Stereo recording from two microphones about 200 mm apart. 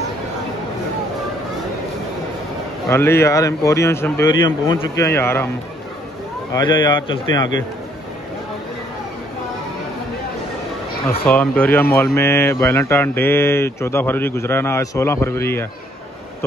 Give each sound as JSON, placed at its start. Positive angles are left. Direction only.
{"t": 2.9, "sound": "speech", "side_deg": 10}
{"t": 6.5, "sound": "speech", "side_deg": 20}
{"t": 11.1, "sound": "speech", "side_deg": 5}